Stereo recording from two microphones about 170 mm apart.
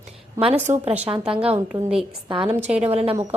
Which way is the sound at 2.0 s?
30° right (ahead or behind).